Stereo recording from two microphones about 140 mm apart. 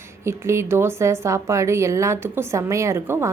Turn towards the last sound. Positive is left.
turn(degrees=-20)  # may be behind; listen again after turning